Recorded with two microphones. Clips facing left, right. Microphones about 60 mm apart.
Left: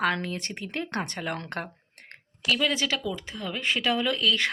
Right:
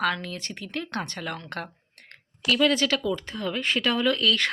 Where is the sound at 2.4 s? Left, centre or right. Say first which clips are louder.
Right 4 dB; centre.